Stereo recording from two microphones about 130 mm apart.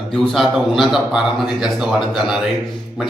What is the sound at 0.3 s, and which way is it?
A man's voice, centre (ahead or behind).